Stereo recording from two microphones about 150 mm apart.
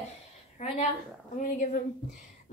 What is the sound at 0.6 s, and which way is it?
A woman's voice, 50° left (ahead or behind).